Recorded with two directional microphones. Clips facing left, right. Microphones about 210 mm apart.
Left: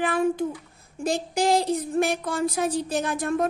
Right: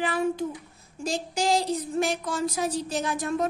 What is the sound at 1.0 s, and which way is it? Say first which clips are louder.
Speech: left 4 dB; 55° left (ahead or behind).